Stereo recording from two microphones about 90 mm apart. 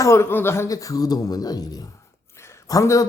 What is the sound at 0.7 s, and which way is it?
Speech, 40° left (ahead or behind).